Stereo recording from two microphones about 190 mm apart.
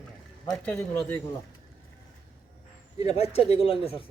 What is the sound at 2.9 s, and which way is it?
Speech, 30° left (ahead or behind).